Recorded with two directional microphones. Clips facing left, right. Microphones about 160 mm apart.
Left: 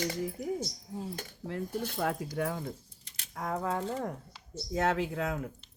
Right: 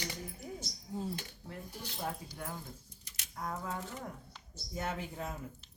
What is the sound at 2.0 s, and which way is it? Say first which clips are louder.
Speech: left 7 dB; 85° left.